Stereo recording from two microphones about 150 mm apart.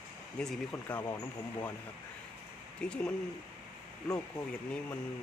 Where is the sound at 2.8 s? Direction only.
5° left (ahead or behind).